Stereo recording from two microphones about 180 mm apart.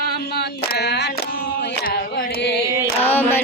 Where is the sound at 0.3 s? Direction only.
65° left (ahead or behind).